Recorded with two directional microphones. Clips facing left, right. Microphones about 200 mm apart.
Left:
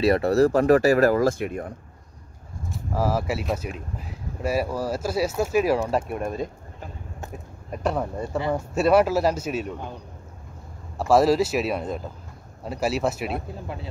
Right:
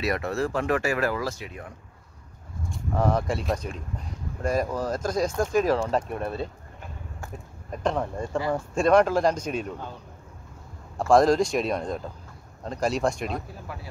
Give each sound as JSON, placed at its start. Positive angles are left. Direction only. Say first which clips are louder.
{"t": 0.0, "sound": "speech", "louder": "left 8 dB", "side_deg": 35}
{"t": 2.7, "sound": "speech", "louder": "even", "side_deg": 5}
{"t": 7.8, "sound": "speech", "louder": "left 1 dB", "side_deg": 10}
{"t": 11.0, "sound": "speech", "louder": "even", "side_deg": 5}
{"t": 13.5, "sound": "speech", "louder": "left 5 dB", "side_deg": 25}